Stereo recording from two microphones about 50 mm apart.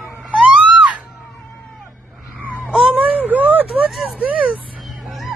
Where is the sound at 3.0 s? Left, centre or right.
Right.